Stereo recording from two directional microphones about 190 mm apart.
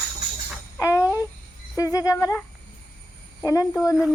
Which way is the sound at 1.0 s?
10° right (ahead or behind).